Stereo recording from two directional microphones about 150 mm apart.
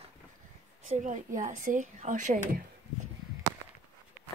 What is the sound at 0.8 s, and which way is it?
Speech, 55° right (ahead or behind).